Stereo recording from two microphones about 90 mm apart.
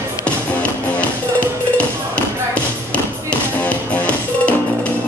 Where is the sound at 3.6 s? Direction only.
15° left (ahead or behind).